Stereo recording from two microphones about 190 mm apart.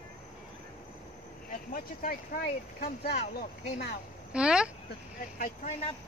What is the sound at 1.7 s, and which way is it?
Speech, 50° left (ahead or behind).